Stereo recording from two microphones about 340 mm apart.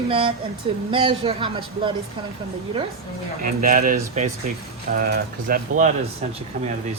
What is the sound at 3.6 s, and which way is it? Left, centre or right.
Speech, right.